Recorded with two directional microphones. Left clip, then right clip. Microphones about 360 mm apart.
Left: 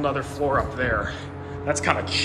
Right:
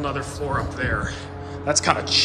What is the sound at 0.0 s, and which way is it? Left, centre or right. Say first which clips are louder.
A man's voice: left 3 dB; centre.